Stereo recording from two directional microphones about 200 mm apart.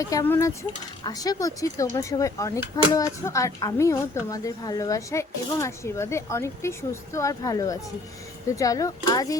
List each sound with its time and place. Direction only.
0.0 s speech: 15° left (ahead or behind)